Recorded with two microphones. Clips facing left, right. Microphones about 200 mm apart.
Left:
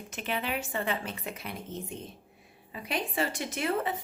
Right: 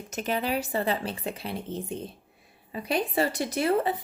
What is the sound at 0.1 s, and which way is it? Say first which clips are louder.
A woman's voice: right 5 dB; 40° right (ahead or behind).